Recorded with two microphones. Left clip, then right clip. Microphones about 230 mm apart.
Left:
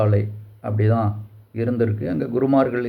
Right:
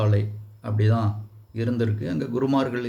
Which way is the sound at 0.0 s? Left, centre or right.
Centre.